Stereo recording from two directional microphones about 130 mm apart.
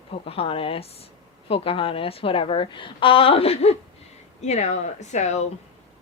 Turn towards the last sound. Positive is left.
turn(degrees=60)  # may be behind; listen again after turning